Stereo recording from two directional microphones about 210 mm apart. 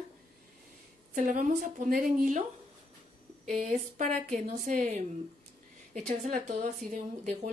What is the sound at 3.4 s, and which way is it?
A woman's voice, 35° right (ahead or behind).